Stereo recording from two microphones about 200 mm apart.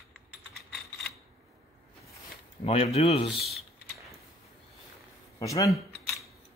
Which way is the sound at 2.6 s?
30° left (ahead or behind).